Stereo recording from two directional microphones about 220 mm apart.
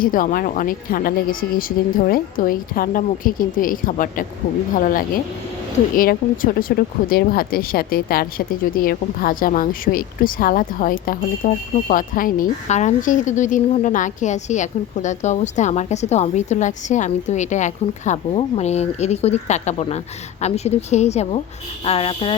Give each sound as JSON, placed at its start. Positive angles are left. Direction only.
{"t": 0.0, "sound": "a woman's voice", "side_deg": 40}